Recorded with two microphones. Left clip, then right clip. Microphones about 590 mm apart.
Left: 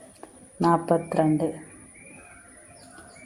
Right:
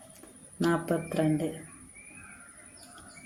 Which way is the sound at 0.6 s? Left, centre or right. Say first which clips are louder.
Left 7 dB; right.